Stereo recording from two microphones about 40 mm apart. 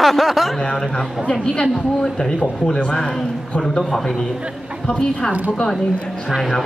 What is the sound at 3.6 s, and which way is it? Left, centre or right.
Speech, centre.